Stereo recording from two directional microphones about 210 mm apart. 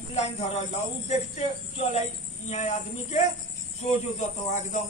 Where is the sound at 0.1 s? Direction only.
30° left (ahead or behind).